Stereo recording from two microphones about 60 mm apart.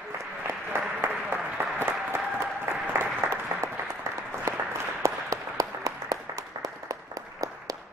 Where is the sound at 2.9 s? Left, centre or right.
Right.